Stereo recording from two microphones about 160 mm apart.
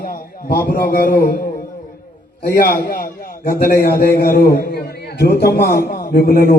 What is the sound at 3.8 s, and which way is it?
A man's voice, 75° left (ahead or behind).